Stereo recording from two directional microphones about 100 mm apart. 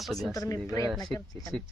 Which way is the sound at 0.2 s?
35° left (ahead or behind).